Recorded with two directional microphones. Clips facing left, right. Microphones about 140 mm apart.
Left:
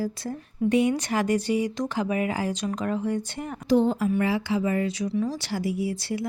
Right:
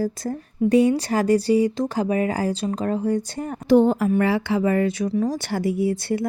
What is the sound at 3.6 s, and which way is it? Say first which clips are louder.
Speech: right 5 dB; 60° right (ahead or behind).